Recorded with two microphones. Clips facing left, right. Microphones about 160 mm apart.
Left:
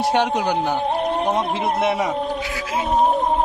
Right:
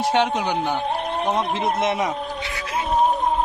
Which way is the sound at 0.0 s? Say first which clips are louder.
Left 1 dB; 10° left (ahead or behind).